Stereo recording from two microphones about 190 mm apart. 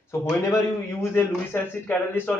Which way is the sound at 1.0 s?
15° left (ahead or behind).